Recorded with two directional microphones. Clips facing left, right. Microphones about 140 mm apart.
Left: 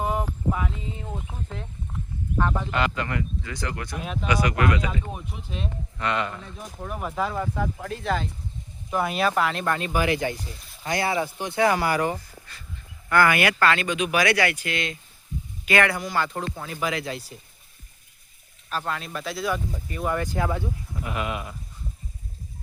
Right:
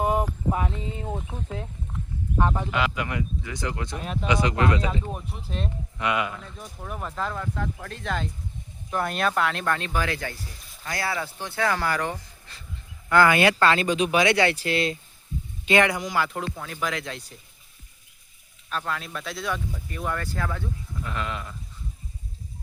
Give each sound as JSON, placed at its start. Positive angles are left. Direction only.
{"t": 0.0, "sound": "a sound", "side_deg": -20}
{"t": 2.7, "sound": "speech", "side_deg": -5}
{"t": 3.9, "sound": "speech", "side_deg": 0}
{"t": 4.3, "sound": "speech", "side_deg": -25}
{"t": 5.1, "sound": "speech", "side_deg": 0}
{"t": 6.0, "sound": "speech", "side_deg": -10}
{"t": 6.4, "sound": "speech", "side_deg": 5}
{"t": 13.1, "sound": "speech", "side_deg": -15}
{"t": 15.6, "sound": "speech", "side_deg": -20}
{"t": 16.2, "sound": "speech", "side_deg": 0}
{"t": 18.7, "sound": "speech", "side_deg": 0}
{"t": 20.1, "sound": "speech", "side_deg": 20}